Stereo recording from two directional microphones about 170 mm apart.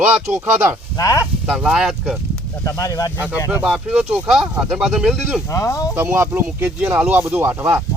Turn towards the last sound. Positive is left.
turn(degrees=-10)  # may be behind; listen again after turning